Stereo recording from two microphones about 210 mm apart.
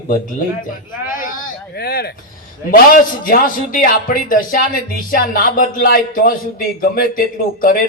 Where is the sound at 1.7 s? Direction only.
50° left (ahead or behind).